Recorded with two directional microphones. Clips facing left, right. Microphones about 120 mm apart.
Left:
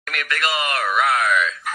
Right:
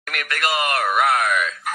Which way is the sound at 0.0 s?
45° right (ahead or behind).